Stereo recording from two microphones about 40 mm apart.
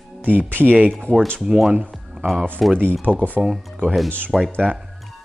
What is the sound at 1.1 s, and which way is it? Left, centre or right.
Speech, left.